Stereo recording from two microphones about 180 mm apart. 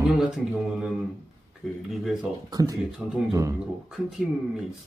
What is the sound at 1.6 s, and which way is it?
Speech, centre (ahead or behind).